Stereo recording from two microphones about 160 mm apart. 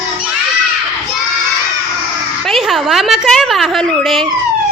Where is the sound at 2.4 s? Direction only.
Centre (ahead or behind).